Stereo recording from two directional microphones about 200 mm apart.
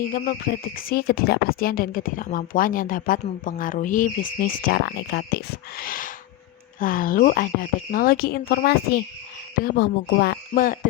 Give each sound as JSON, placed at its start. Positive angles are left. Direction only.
{"t": 0.8, "sound": "speech", "side_deg": 50}